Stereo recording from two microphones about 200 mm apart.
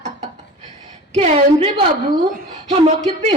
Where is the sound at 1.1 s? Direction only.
30° right (ahead or behind).